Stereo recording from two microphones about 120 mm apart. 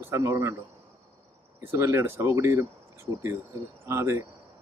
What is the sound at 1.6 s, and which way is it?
Speech, 20° right (ahead or behind).